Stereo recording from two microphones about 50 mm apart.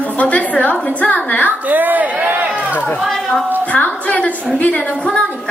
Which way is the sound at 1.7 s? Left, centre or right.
Right.